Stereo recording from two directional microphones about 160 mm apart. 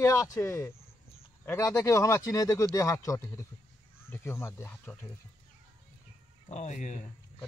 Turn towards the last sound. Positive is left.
turn(degrees=50)  # may be behind; listen again after turning